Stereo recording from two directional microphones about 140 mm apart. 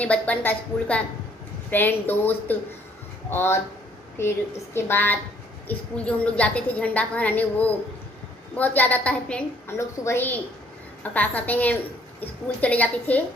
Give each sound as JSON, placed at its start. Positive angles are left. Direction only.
{"t": 0.0, "sound": "a woman's voice", "side_deg": 10}